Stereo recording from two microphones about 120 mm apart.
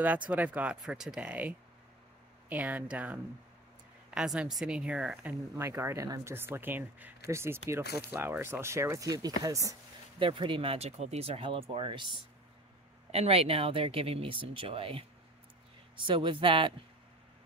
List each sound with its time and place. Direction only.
0.0 s speech: 15° right (ahead or behind)
2.5 s speech: 15° right (ahead or behind)
5.6 s speech: 20° right (ahead or behind)
6.3 s speech: 20° right (ahead or behind)
10.1 s speech: 45° right (ahead or behind)
13.1 s speech: 55° right (ahead or behind)